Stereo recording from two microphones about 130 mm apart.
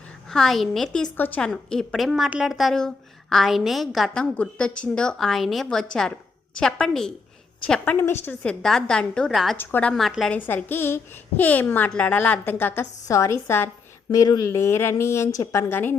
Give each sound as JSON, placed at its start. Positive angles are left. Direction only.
{"t": 0.3, "sound": "a woman's voice", "side_deg": 5}
{"t": 1.1, "sound": "a woman's voice", "side_deg": 15}
{"t": 8.2, "sound": "a woman's voice", "side_deg": 10}
{"t": 9.6, "sound": "speech", "side_deg": 15}
{"t": 9.9, "sound": "a woman's voice", "side_deg": 0}
{"t": 10.3, "sound": "speech", "side_deg": 15}